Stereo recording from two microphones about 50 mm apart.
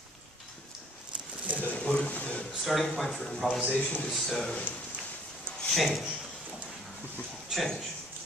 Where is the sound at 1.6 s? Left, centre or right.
Left.